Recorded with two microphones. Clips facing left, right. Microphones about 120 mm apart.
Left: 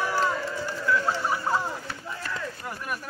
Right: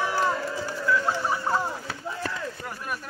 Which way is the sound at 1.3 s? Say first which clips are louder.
Even; centre (ahead or behind).